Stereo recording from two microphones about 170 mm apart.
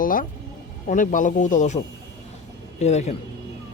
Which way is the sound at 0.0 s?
55° left (ahead or behind).